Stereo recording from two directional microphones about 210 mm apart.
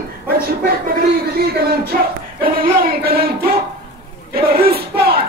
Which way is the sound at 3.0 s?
45° right (ahead or behind).